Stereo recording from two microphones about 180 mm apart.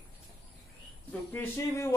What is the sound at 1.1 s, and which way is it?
Speech, 10° left (ahead or behind).